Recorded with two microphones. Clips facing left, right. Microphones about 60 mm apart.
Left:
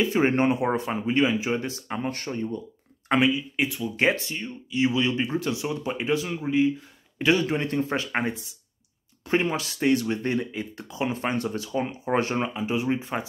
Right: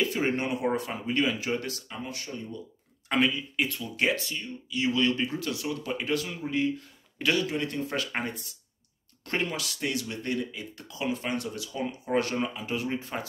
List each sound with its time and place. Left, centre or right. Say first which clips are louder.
0.0 s speech: left 6 dB; left
1.9 s speech: left 7 dB; left
3.2 s speech: left 3 dB; centre
3.9 s a man's voice: left 4 dB; left
7.4 s speech: left 5 dB; left; by 9.5 s centre
9.5 s speech: left 8 dB; left